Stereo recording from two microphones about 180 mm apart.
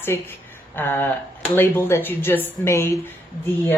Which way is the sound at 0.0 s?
10° left (ahead or behind).